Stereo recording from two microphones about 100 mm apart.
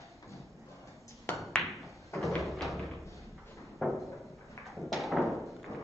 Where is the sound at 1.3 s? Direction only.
25° left (ahead or behind).